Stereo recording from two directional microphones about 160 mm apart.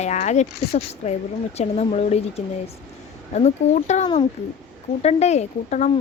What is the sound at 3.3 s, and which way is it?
Speech, 45° left (ahead or behind).